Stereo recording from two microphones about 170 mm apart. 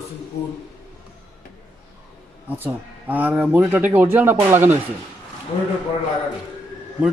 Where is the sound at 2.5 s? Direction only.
10° right (ahead or behind).